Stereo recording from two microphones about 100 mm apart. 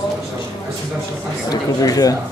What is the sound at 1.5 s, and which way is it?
Speech, 40° left (ahead or behind).